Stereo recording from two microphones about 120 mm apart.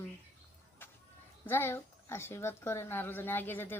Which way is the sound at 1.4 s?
20° left (ahead or behind).